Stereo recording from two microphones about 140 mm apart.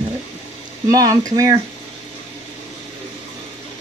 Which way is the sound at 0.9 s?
25° right (ahead or behind).